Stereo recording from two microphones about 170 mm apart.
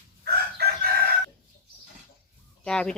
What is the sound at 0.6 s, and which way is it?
Chicken, 65° right (ahead or behind).